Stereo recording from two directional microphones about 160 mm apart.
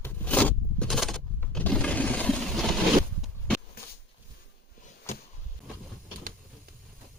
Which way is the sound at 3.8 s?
70° left (ahead or behind).